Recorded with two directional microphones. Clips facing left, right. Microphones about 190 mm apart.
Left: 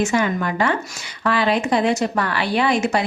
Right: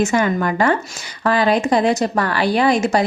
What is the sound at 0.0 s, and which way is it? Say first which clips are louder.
A woman's voice: right 3 dB; 45° right (ahead or behind).